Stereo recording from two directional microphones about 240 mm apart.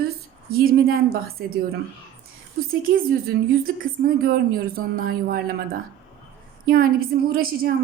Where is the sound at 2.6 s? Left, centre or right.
Right.